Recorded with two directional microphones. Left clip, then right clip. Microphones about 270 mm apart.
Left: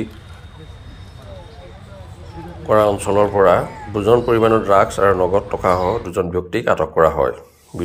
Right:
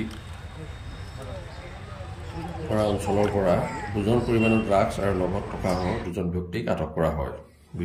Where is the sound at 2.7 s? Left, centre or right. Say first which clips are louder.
Left 11 dB; left.